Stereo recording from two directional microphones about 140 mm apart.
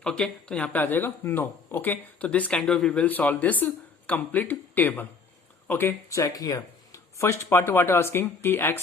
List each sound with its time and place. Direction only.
0.0 s speech: 5° left (ahead or behind)